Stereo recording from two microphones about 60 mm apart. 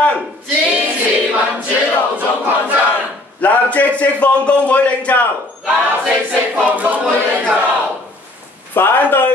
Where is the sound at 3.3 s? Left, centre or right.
Left.